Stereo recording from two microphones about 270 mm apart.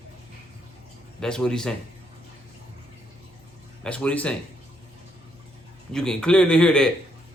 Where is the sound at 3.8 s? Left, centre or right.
Centre.